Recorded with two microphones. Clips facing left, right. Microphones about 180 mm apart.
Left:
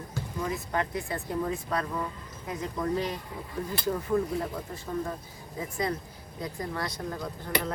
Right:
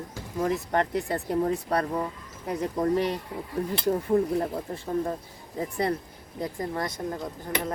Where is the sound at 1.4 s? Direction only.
40° right (ahead or behind).